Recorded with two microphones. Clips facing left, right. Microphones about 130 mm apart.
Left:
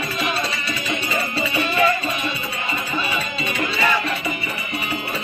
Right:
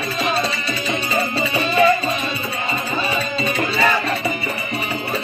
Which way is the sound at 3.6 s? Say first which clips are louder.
Right 2 dB; 35° right (ahead or behind).